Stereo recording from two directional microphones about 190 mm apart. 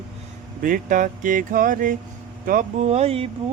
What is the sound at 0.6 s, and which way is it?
Speech, 45° right (ahead or behind).